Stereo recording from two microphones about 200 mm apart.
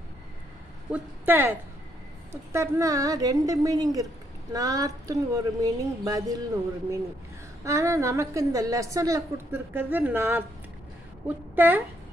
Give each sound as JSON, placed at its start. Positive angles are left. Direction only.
{"t": 0.9, "sound": "a woman's voice", "side_deg": -10}
{"t": 7.6, "sound": "a woman's voice", "side_deg": -15}